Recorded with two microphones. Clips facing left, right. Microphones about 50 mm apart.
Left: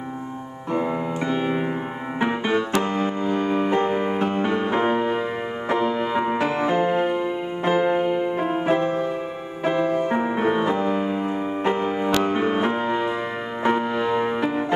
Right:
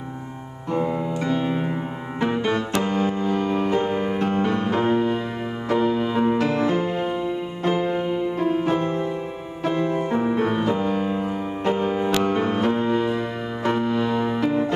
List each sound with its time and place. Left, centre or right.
0.7 s music: centre